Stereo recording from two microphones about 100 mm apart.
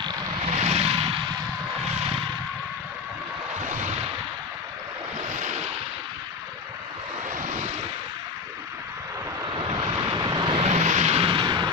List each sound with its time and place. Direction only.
0.6 s vehicle: 90° right
9.6 s vehicle: 50° right (ahead or behind)
10.6 s vehicle: 90° right
11.3 s music: 45° right (ahead or behind)